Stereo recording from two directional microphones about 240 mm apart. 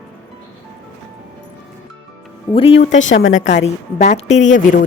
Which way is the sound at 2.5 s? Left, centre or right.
Centre.